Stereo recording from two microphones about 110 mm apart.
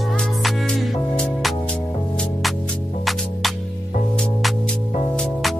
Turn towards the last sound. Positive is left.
turn(degrees=5)  # may be behind; listen again after turning